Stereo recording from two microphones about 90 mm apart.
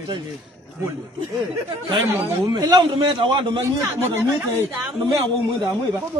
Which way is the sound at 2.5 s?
65° right (ahead or behind).